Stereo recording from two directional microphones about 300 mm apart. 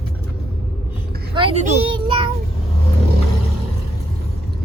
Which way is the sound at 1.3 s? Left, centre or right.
Centre.